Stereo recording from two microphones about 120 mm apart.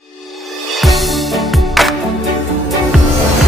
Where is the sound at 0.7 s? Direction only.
Centre (ahead or behind).